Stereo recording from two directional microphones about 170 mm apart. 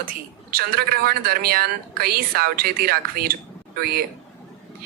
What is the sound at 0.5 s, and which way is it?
Speech, 65° right (ahead or behind).